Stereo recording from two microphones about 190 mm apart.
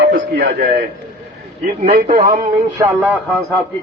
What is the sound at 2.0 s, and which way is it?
Speech, 40° right (ahead or behind).